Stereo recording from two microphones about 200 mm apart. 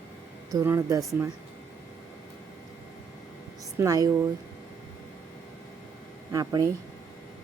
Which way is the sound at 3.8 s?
15° right (ahead or behind).